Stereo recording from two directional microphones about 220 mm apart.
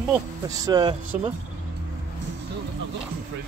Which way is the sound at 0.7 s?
20° right (ahead or behind).